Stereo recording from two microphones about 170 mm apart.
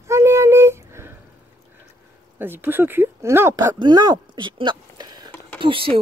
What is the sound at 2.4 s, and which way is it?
Speech, 10° right (ahead or behind).